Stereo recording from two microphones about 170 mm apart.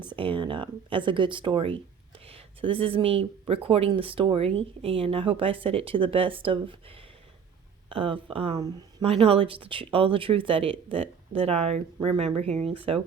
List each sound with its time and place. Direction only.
0.2 s speech: 30° right (ahead or behind)
7.9 s speech: 30° right (ahead or behind)